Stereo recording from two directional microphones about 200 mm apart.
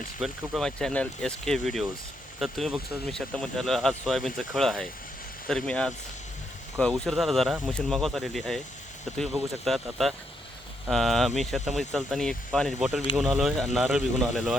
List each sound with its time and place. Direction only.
0.2 s speech: centre (ahead or behind)